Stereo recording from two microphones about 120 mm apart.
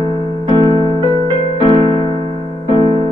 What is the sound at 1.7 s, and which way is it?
Music, 45° right (ahead or behind).